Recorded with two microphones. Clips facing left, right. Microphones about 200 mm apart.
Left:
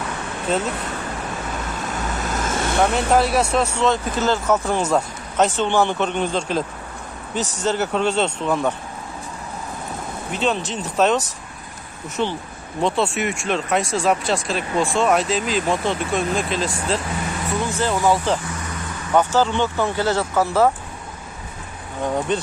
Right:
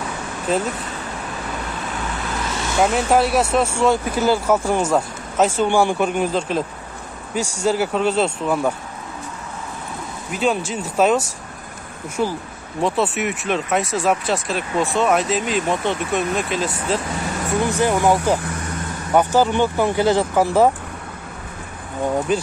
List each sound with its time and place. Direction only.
2.1 s vehicle: 45° left (ahead or behind)
2.8 s speech: 5° right (ahead or behind)
10.3 s speech: 5° right (ahead or behind)
17.6 s speech: 15° right (ahead or behind)
22.3 s speech: 5° right (ahead or behind)